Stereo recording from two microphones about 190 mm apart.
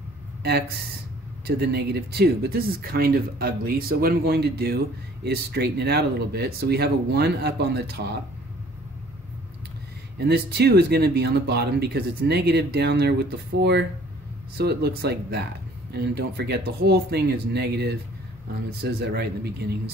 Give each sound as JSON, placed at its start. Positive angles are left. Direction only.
{"t": 0.4, "sound": "speech", "side_deg": -55}
{"t": 10.1, "sound": "speech", "side_deg": -60}